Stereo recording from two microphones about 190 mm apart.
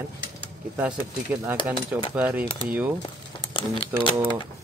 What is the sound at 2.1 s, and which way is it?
Speech, 10° right (ahead or behind).